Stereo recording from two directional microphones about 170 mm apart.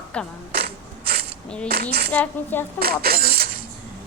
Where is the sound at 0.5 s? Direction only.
75° right (ahead or behind).